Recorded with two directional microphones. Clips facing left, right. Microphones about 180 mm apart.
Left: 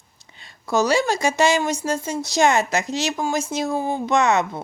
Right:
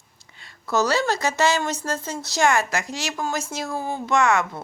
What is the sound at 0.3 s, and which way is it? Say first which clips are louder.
A woman's voice: left 2 dB; 20° left (ahead or behind).